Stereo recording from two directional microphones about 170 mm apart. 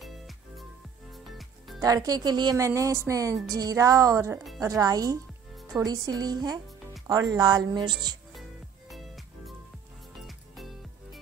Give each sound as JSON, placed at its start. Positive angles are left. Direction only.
{"t": 0.0, "sound": "music", "side_deg": 0}
{"t": 1.8, "sound": "speech", "side_deg": -20}
{"t": 5.6, "sound": "music", "side_deg": 0}
{"t": 5.9, "sound": "speech", "side_deg": -25}
{"t": 8.4, "sound": "music", "side_deg": 0}